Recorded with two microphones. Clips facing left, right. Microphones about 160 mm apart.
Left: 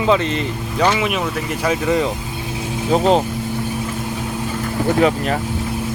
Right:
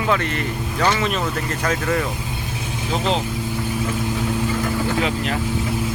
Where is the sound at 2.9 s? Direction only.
45° left (ahead or behind).